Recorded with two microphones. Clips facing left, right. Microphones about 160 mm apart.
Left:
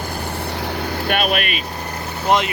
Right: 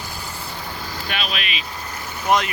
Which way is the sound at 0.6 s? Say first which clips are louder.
Left 9 dB; 70° left (ahead or behind).